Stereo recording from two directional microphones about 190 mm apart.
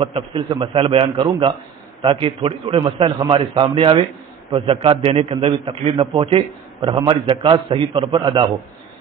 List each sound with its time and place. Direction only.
0.0 s a man's voice: 30° right (ahead or behind)